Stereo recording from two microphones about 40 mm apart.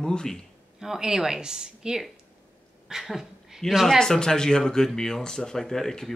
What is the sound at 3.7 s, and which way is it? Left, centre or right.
Speech, centre.